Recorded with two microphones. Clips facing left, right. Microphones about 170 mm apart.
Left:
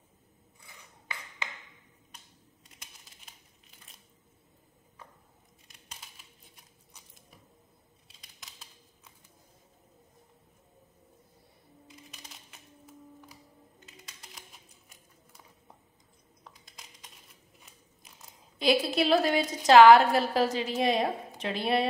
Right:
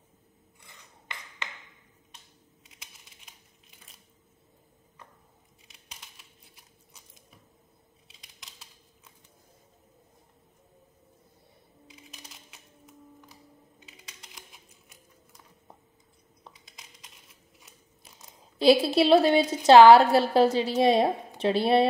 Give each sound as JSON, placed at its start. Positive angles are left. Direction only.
{"t": 2.8, "sound": "a sound", "side_deg": 0}
{"t": 8.1, "sound": "computer keyboard", "side_deg": 0}
{"t": 11.9, "sound": "music", "side_deg": 0}
{"t": 18.6, "sound": "a woman's voice", "side_deg": -30}